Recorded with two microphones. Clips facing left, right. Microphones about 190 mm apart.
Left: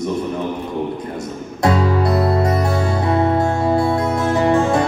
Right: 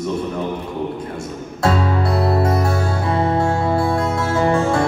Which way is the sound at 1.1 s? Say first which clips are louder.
Left 1 dB; 20° left (ahead or behind).